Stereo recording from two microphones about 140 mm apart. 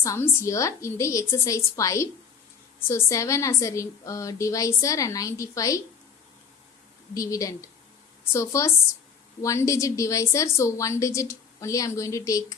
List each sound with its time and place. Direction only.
0.0 s a woman's voice: 20° left (ahead or behind)
7.1 s a woman's voice: 25° left (ahead or behind)